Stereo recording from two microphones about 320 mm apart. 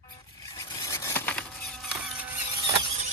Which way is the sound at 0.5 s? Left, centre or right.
Centre.